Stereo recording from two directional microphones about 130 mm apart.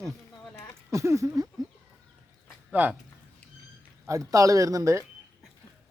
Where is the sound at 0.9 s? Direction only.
25° right (ahead or behind).